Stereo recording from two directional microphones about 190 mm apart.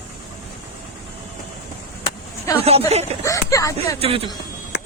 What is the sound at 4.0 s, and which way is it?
Speech, 30° right (ahead or behind).